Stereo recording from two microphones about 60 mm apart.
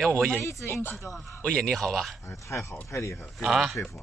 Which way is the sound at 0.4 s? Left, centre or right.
Left.